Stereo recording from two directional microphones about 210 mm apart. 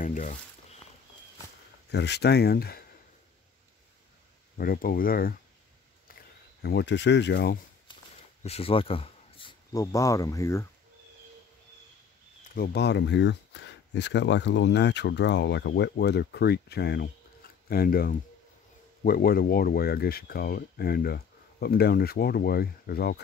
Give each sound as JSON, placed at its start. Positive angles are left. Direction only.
{"t": 0.0, "sound": "a sound", "side_deg": 35}
{"t": 1.9, "sound": "speech", "side_deg": 55}
{"t": 4.6, "sound": "speech", "side_deg": 45}
{"t": 6.0, "sound": "a sound", "side_deg": 50}
{"t": 8.4, "sound": "speech", "side_deg": 30}
{"t": 12.5, "sound": "speech", "side_deg": 50}